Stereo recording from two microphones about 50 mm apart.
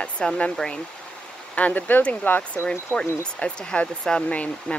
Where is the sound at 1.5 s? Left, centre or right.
Left.